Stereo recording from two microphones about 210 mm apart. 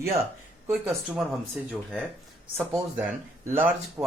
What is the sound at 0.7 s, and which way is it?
Speech, centre (ahead or behind).